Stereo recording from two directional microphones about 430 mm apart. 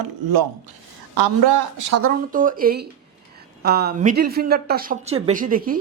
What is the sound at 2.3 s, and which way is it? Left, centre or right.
Speech, centre.